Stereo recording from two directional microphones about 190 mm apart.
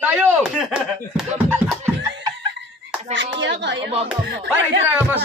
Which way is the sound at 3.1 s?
70° right (ahead or behind).